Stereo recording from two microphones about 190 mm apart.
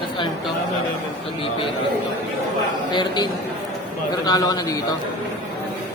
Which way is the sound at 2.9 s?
20° left (ahead or behind).